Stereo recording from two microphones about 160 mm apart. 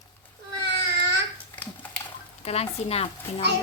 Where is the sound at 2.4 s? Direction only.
40° left (ahead or behind).